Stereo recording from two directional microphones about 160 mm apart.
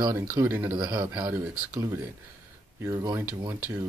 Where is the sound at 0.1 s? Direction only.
15° right (ahead or behind).